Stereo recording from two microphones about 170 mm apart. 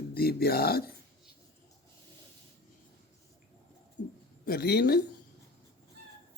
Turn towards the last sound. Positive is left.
turn(degrees=70)  # may be behind; listen again after turning